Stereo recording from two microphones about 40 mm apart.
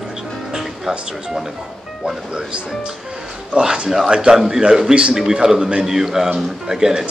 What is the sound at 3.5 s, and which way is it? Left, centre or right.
Speech, right.